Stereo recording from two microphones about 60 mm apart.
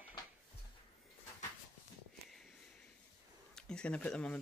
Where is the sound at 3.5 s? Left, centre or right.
Centre.